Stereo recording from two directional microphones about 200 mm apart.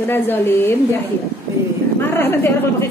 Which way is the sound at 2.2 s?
10° left (ahead or behind).